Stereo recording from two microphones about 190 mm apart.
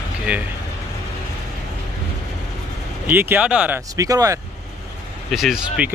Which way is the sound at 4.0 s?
20° right (ahead or behind).